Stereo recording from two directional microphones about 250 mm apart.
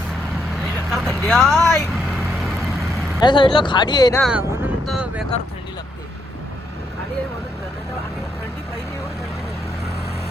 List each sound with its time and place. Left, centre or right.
0.9 s speech: centre
3.2 s speech: centre
4.2 s vehicle: centre